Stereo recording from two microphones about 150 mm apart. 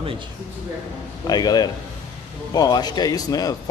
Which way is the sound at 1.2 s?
25° left (ahead or behind).